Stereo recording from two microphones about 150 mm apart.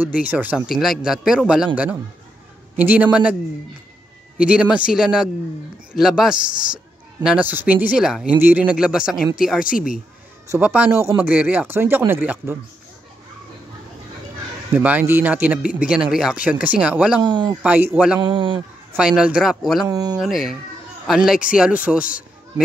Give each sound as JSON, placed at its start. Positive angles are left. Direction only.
{"t": 0.0, "sound": "a man's voice", "side_deg": -10}
{"t": 2.7, "sound": "speech", "side_deg": -10}
{"t": 4.4, "sound": "a man's voice", "side_deg": -10}
{"t": 9.7, "sound": "speech", "side_deg": 70}
{"t": 10.5, "sound": "speech", "side_deg": -10}
{"t": 14.7, "sound": "speech", "side_deg": -10}
{"t": 17.2, "sound": "speech", "side_deg": -30}
{"t": 17.6, "sound": "speech", "side_deg": -10}
{"t": 18.2, "sound": "speech", "side_deg": -35}
{"t": 18.9, "sound": "a man's voice", "side_deg": -5}
{"t": 19.9, "sound": "speech", "side_deg": -25}
{"t": 20.2, "sound": "a man's voice", "side_deg": 0}